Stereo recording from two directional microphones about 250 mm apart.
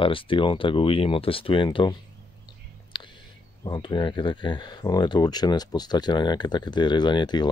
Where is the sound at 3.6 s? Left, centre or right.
Centre.